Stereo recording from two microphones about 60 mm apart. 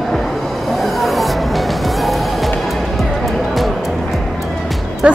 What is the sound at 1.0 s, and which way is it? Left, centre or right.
Music, centre.